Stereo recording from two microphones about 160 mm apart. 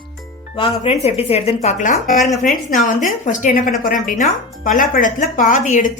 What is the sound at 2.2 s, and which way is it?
Speech, centre (ahead or behind).